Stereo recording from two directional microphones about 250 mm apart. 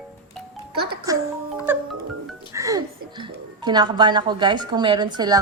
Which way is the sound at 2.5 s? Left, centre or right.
Centre.